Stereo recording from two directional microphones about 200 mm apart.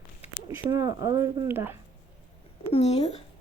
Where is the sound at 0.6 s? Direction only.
15° right (ahead or behind).